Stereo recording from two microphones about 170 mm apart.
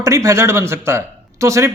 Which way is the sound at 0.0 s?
20° right (ahead or behind).